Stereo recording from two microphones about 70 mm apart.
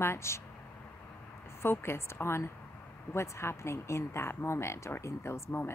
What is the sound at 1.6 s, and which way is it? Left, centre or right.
Speech, left.